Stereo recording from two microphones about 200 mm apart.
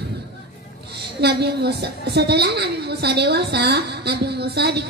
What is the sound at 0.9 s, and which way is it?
A woman's voice, 55° right (ahead or behind).